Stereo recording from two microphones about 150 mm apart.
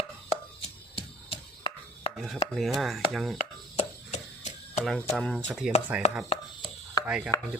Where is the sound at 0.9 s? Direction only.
35° left (ahead or behind).